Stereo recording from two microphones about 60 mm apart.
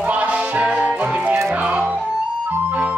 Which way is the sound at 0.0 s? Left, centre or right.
Right.